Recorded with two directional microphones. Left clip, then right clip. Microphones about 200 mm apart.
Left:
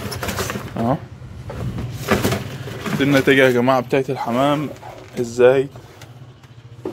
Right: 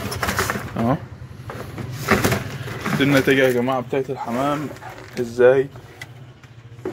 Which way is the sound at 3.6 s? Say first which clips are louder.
Left 5 dB; 25° left (ahead or behind).